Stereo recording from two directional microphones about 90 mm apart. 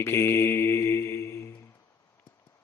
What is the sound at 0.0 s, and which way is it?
Mantra, 30° left (ahead or behind).